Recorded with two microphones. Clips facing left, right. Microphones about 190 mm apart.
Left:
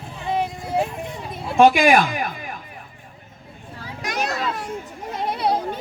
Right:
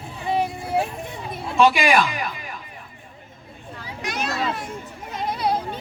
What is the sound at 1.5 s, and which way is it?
Speech, 50° left (ahead or behind).